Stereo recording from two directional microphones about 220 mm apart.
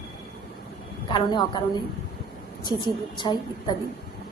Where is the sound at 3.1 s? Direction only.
20° left (ahead or behind).